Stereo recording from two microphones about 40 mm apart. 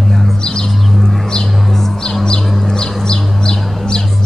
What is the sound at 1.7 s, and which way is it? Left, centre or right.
Music, centre.